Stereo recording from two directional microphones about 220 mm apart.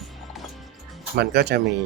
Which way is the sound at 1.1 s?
50° right (ahead or behind).